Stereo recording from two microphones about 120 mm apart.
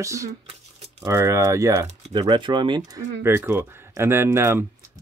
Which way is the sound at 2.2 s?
40° right (ahead or behind).